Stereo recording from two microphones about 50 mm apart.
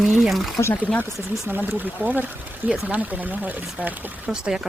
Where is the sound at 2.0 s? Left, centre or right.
Right.